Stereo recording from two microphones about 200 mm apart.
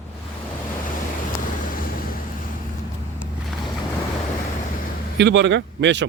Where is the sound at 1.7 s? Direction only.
45° left (ahead or behind).